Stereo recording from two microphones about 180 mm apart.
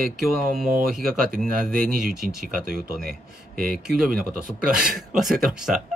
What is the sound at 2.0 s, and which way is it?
Speech, 5° right (ahead or behind).